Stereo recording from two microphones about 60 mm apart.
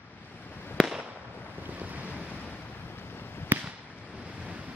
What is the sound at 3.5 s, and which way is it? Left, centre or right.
Fireworks, right.